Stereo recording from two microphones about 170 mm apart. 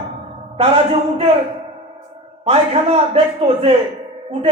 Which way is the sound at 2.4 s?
35° right (ahead or behind).